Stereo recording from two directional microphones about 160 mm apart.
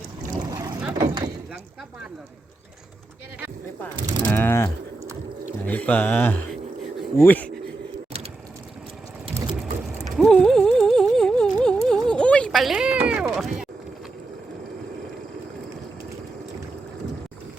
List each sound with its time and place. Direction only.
0.3 s boat: 25° right (ahead or behind)
0.9 s door: 25° right (ahead or behind)
4.3 s speech: 10° left (ahead or behind)
9.6 s a sound: centre (ahead or behind)